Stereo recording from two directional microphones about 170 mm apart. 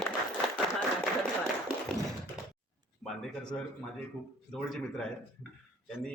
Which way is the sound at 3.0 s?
5° left (ahead or behind).